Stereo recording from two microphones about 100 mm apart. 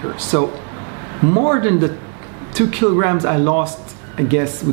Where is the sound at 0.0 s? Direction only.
20° right (ahead or behind).